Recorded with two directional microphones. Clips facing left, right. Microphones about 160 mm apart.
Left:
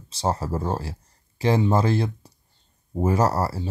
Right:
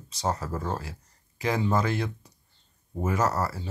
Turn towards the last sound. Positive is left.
turn(degrees=30)  # may be behind; listen again after turning